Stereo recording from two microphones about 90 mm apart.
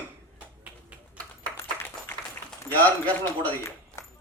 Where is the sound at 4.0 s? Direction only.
35° left (ahead or behind).